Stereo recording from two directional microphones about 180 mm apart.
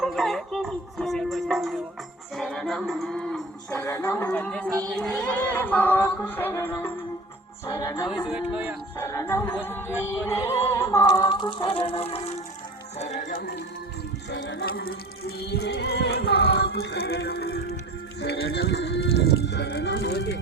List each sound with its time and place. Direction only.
0.0 s music: centre (ahead or behind); by 8.0 s 20° left (ahead or behind)
8.3 s speech: 10° right (ahead or behind)
9.0 s music: 15° left (ahead or behind); by 12.3 s 35° left (ahead or behind)
13.0 s speech: 40° left (ahead or behind)
14.3 s speech: 90° left
14.7 s music: 55° left (ahead or behind)